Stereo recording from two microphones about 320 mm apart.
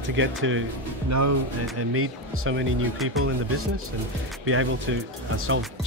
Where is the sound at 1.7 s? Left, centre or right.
Right.